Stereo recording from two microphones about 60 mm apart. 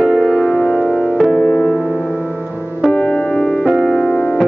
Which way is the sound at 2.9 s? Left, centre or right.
Centre.